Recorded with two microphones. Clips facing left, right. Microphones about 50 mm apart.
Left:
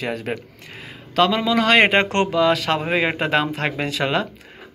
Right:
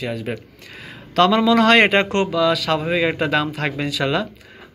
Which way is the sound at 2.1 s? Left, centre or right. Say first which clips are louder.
Even; left.